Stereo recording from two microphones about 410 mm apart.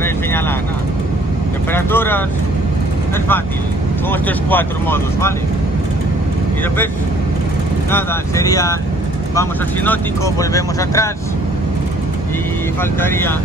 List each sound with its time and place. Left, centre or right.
1.7 s vehicle: centre
4.1 s speech: centre
7.9 s speech: centre